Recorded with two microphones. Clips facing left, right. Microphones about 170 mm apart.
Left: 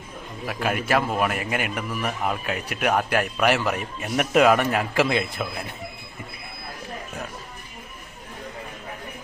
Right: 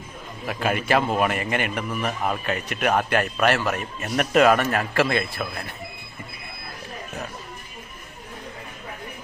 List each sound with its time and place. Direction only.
0.4 s a man's voice: centre (ahead or behind); by 5.5 s 20° left (ahead or behind)